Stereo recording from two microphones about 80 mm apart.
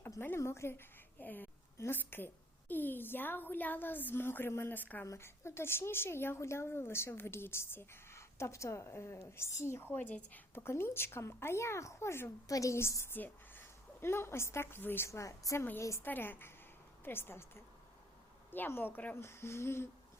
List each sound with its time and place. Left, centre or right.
0.2 s a woman's voice: left
1.2 s a woman's voice: left
5.0 s a woman's voice: left; by 10.4 s centre
10.5 s a woman's voice: left
12.5 s a woman's voice: left
16.0 s a woman's voice: left